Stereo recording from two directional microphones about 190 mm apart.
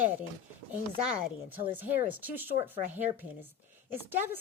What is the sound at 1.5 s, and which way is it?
Speech, 10° right (ahead or behind).